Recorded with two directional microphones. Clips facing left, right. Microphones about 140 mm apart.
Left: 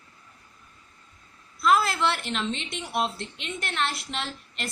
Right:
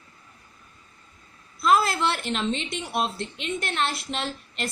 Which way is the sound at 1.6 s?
25° right (ahead or behind).